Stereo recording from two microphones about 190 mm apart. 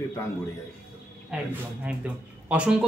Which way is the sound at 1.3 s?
5° right (ahead or behind).